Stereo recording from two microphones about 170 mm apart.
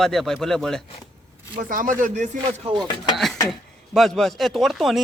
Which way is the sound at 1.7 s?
55° right (ahead or behind).